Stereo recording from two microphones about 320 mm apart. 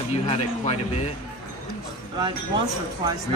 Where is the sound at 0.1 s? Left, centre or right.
Centre.